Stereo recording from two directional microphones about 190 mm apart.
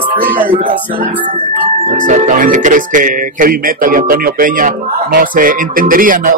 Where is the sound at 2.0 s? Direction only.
40° right (ahead or behind).